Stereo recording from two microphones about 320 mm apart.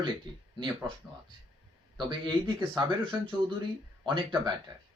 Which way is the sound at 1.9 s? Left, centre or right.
Centre.